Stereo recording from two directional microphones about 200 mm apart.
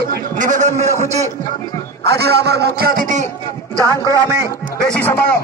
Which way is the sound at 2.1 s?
55° right (ahead or behind).